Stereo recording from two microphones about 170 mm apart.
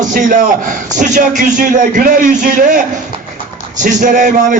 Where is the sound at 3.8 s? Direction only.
50° right (ahead or behind).